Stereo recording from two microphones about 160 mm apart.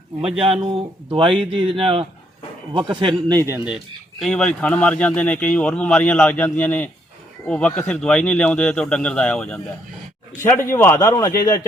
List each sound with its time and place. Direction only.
0.4 s a man's voice: 35° right (ahead or behind)
4.2 s a man's voice: 5° left (ahead or behind); by 11.6 s 20° left (ahead or behind)